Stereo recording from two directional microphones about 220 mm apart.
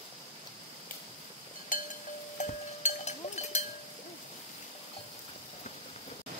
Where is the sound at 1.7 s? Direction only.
35° left (ahead or behind).